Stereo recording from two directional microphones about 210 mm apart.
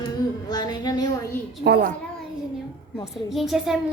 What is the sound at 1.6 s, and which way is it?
Speech, 50° right (ahead or behind).